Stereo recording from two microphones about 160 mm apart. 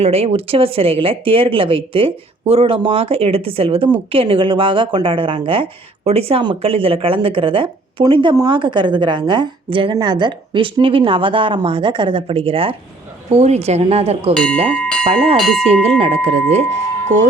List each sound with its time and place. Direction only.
0.0 s speech: 40° right (ahead or behind)
15.4 s speech: centre (ahead or behind)
16.0 s speech: 40° right (ahead or behind)